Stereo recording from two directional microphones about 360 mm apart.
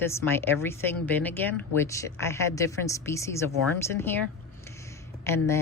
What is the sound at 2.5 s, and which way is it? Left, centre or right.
Speech, centre.